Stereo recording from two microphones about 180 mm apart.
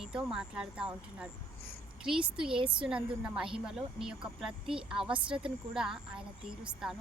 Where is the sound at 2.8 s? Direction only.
5° right (ahead or behind).